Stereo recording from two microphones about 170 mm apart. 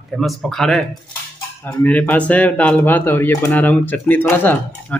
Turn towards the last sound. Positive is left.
turn(degrees=10)  # may be behind; listen again after turning